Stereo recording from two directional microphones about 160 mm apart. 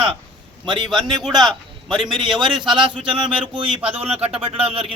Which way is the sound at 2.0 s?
30° right (ahead or behind).